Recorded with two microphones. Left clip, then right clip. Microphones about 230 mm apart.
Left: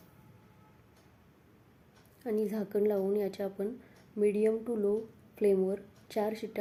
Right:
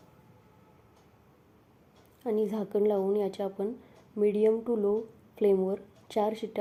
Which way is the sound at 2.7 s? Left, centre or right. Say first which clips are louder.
Right 3 dB; centre.